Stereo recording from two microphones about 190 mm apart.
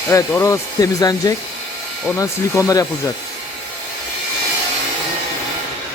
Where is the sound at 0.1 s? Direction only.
15° left (ahead or behind).